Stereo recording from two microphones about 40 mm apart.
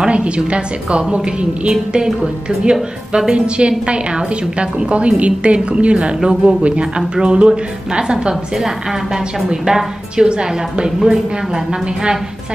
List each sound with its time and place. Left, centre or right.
0.1 s a woman's voice: right
8.5 s a woman's voice: centre